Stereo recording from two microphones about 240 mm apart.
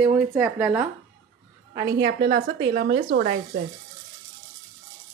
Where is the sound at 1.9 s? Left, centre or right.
Right.